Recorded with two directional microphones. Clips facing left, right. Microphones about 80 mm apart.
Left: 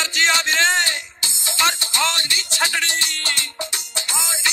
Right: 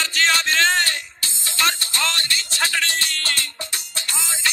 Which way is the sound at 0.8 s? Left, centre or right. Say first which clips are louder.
Even; centre.